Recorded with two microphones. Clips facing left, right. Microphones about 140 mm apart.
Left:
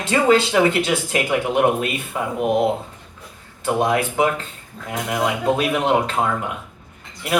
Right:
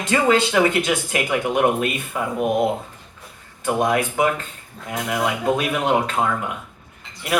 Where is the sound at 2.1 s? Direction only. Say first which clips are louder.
Left 1 dB; 20° left (ahead or behind).